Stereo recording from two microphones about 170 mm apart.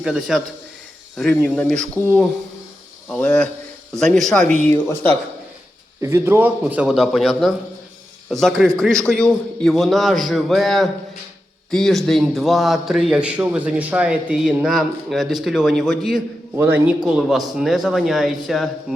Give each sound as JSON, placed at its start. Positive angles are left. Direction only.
{"t": 0.0, "sound": "a man's voice", "side_deg": 0}
{"t": 6.0, "sound": "a man's voice", "side_deg": -15}
{"t": 16.6, "sound": "a man's voice", "side_deg": -10}